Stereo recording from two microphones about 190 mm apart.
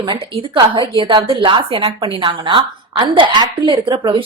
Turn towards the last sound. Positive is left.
turn(degrees=-25)  # may be behind; listen again after turning